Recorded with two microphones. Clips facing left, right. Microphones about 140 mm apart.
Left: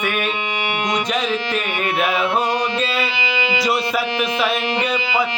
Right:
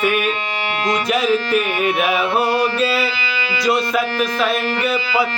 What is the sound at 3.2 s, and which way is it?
Music, 20° left (ahead or behind).